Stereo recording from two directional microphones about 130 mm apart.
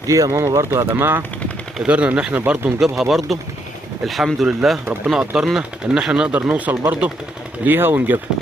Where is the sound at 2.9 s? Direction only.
Centre (ahead or behind); by 8.1 s 15° right (ahead or behind).